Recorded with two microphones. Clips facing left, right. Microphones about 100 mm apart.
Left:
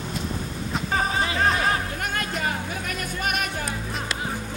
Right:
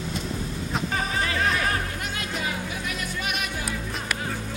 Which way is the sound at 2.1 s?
45° left (ahead or behind).